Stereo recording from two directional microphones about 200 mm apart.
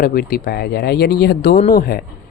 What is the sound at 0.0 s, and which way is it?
Speech, 50° left (ahead or behind).